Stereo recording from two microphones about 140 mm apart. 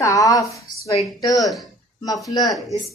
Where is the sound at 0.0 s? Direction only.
25° left (ahead or behind).